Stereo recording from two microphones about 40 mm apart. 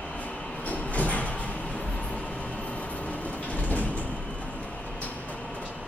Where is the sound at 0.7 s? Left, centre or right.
Left.